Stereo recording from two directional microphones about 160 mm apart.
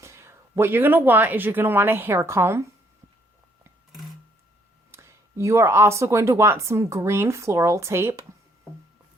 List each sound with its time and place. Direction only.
0.0 s speech: 15° right (ahead or behind)
4.9 s speech: 15° right (ahead or behind)